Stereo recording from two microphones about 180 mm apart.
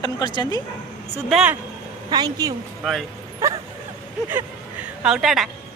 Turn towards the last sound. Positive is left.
turn(degrees=0)  # may be behind; listen again after turning